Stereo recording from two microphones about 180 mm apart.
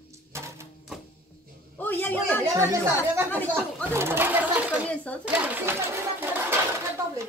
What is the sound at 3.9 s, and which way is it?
Speech, 15° right (ahead or behind).